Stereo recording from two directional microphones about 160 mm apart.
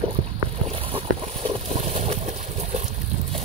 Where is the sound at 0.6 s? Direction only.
35° right (ahead or behind).